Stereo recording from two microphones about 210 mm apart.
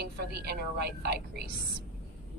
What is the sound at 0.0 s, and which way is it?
A woman's voice, 50° right (ahead or behind).